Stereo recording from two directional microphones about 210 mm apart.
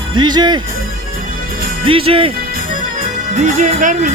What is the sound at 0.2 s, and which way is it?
Speech, 20° right (ahead or behind).